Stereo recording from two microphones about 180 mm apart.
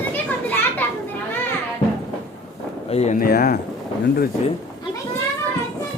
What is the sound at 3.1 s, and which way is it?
Speech, 55° left (ahead or behind).